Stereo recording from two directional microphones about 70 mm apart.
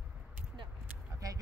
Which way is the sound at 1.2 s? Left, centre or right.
Right.